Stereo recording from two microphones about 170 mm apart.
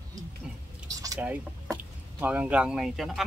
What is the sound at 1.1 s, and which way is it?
Speech, 10° right (ahead or behind).